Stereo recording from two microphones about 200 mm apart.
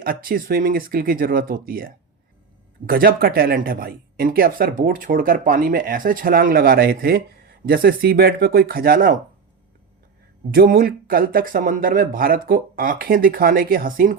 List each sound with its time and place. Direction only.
0.0 s speech: 45° right (ahead or behind)
10.5 s speech: 45° right (ahead or behind)